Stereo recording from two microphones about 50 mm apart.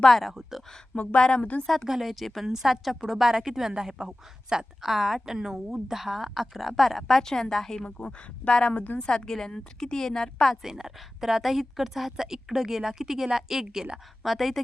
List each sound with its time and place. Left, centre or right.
0.1 s a woman's voice: centre
0.9 s a woman's voice: left
1.6 s a woman's voice: centre
10.5 s a woman's voice: centre